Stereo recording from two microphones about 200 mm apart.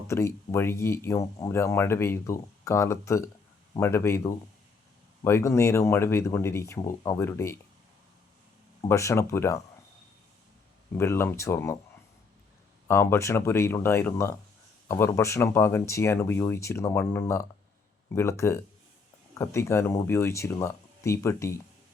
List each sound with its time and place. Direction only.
0.1 s speech: 15° left (ahead or behind)
8.9 s speech: 15° left (ahead or behind)
10.9 s speech: 10° left (ahead or behind)
12.9 s speech: 10° left (ahead or behind)